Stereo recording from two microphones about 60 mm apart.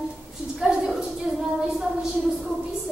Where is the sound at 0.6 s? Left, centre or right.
Centre.